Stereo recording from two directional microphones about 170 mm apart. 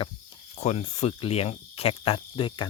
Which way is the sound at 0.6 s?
40° left (ahead or behind).